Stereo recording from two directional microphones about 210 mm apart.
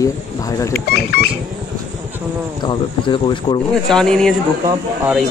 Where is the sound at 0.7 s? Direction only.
50° left (ahead or behind).